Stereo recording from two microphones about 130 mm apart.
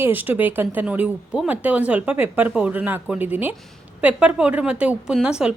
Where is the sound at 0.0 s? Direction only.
15° right (ahead or behind).